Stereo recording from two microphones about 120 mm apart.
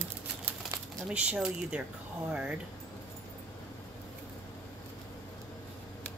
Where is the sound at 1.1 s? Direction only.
10° right (ahead or behind).